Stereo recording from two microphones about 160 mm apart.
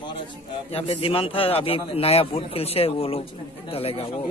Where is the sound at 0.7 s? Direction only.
35° left (ahead or behind).